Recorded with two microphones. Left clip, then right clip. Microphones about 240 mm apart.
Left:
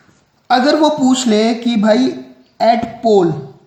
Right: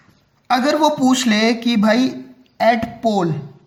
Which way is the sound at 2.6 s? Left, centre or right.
Right.